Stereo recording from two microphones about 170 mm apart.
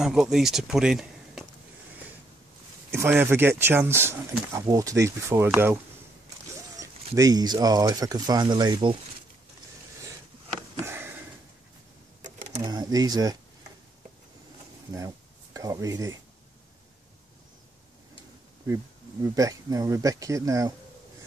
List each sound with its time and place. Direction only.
0.0 s speech: 5° right (ahead or behind)
2.9 s speech: 15° right (ahead or behind)
7.2 s speech: 20° right (ahead or behind)
10.8 s sniff: 15° right (ahead or behind)
12.6 s speech: 25° right (ahead or behind)
15.0 s speech: 20° right (ahead or behind)
19.2 s speech: 20° right (ahead or behind)